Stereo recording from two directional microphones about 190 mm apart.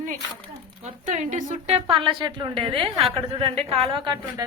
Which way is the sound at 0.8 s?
40° right (ahead or behind).